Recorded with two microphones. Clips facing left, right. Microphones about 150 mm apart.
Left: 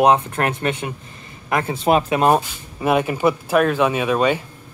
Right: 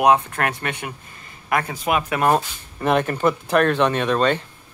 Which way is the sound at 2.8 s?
5° left (ahead or behind).